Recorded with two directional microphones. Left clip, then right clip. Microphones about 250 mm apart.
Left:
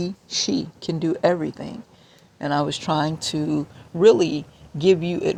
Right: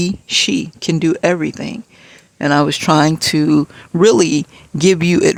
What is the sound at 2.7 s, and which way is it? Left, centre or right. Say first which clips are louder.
Speech: right 10 dB; right.